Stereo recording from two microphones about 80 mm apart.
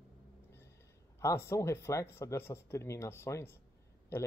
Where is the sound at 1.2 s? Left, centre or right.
Left.